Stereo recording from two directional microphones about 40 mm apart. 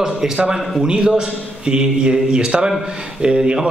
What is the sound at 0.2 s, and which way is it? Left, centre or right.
Speech, centre.